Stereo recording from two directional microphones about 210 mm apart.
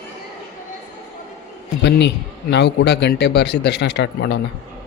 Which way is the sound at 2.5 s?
55° left (ahead or behind).